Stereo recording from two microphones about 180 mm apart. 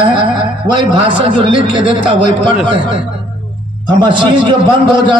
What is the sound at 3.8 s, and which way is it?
Speech, 25° right (ahead or behind).